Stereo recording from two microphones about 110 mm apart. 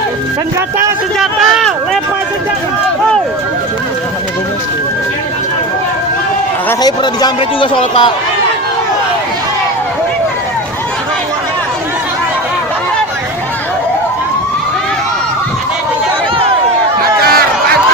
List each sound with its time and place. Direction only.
1.2 s speech: centre (ahead or behind)
6.8 s speech: 40° left (ahead or behind)
7.7 s speech: 50° left (ahead or behind)